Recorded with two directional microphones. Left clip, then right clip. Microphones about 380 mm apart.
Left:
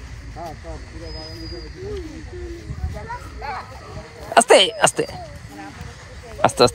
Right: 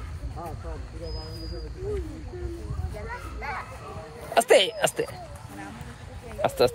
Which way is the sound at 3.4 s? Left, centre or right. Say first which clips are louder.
Left 2 dB; left.